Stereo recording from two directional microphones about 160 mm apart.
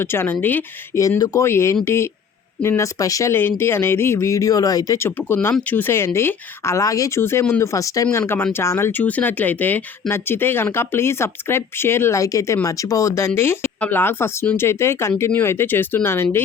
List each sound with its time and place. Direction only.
0.0 s speech: 15° left (ahead or behind)